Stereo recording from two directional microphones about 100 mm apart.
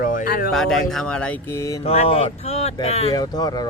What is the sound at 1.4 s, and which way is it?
Mantra, 30° left (ahead or behind).